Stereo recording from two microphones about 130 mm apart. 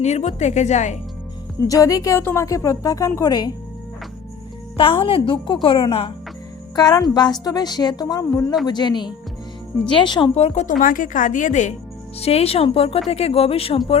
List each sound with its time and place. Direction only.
0.0 s a woman's voice: 60° left (ahead or behind)
1.6 s a woman's voice: 25° left (ahead or behind)
4.8 s speech: 45° left (ahead or behind)
6.7 s a woman's voice: 30° left (ahead or behind)
10.3 s a woman's voice: 55° left (ahead or behind); by 11.7 s 75° left (ahead or behind)
12.2 s speech: 50° left (ahead or behind)